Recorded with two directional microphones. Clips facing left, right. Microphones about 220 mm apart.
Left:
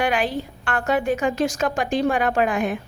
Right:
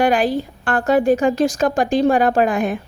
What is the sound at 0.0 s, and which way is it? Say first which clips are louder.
A woman's voice: right 6 dB; 40° right (ahead or behind).